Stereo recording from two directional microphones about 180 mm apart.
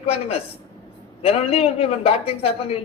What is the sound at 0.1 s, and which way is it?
A man's voice, 35° left (ahead or behind).